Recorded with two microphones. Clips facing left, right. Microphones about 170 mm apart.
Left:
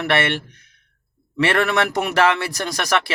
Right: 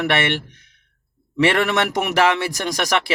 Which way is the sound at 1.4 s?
15° right (ahead or behind).